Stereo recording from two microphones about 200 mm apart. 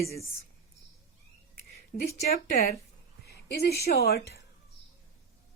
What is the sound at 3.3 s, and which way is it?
A woman's voice, 55° left (ahead or behind).